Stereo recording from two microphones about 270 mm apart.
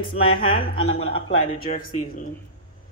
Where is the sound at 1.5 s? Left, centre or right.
Left.